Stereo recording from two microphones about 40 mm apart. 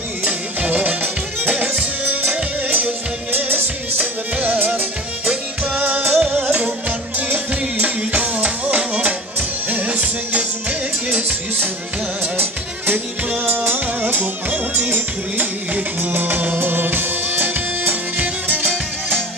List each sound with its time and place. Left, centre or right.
0.2 s music: right
5.3 s music: right
5.8 s music: right
6.3 s music: right
12.4 s music: right
18.2 s music: right